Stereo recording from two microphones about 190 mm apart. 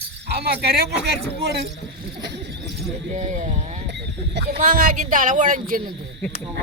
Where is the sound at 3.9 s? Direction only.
65° right (ahead or behind).